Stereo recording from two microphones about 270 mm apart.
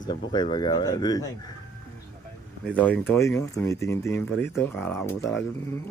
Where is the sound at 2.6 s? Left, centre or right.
Centre.